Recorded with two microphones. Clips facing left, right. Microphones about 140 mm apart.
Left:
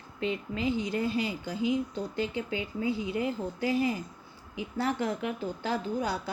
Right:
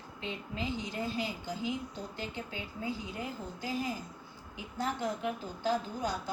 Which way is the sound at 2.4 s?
90° left.